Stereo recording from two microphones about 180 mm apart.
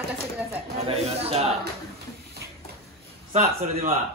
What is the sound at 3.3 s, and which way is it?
Speech, 45° right (ahead or behind).